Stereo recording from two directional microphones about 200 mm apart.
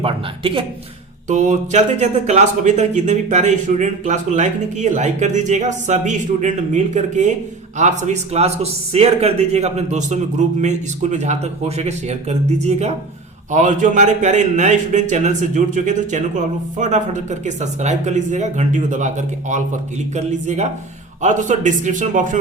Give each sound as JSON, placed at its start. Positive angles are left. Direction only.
{"t": 0.0, "sound": "speech", "side_deg": -25}
{"t": 1.3, "sound": "a man's voice", "side_deg": -35}